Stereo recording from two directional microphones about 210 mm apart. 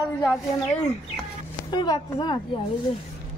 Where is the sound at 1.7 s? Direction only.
20° left (ahead or behind).